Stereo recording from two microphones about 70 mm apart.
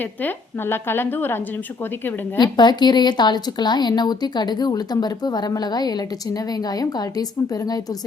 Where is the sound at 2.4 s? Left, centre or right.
Left.